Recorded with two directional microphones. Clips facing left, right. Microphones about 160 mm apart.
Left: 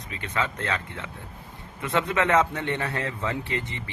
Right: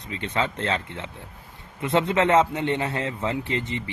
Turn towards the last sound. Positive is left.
turn(degrees=-20)  # may be behind; listen again after turning